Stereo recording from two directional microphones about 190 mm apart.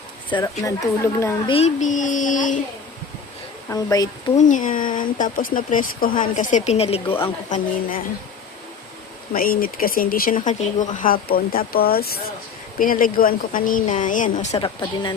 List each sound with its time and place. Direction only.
0.3 s speech: 20° left (ahead or behind)
1.5 s speech: 40° left (ahead or behind)
3.7 s speech: 15° left (ahead or behind)
4.4 s speech: 40° left (ahead or behind)
7.5 s speech: 50° left (ahead or behind)
9.3 s speech: 50° left (ahead or behind)
14.6 s speech: 25° left (ahead or behind)